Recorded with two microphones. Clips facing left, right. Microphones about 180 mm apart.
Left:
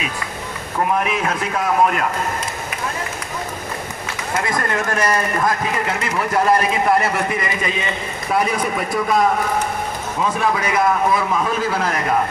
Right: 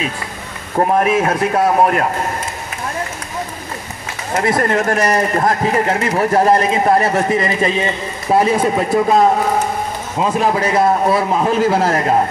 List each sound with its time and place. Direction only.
0.7 s a man's voice: 45° right (ahead or behind)
4.4 s a man's voice: 35° right (ahead or behind)